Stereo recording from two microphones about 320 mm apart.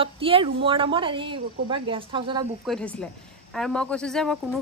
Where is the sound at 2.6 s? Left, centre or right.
Centre.